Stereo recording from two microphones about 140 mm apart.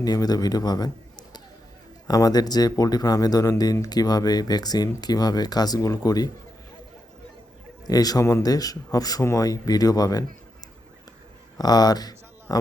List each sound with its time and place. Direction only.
0.0 s speech: 25° left (ahead or behind)
2.0 s speech: 30° left (ahead or behind)
7.9 s speech: 25° left (ahead or behind)
11.5 s speech: 30° left (ahead or behind)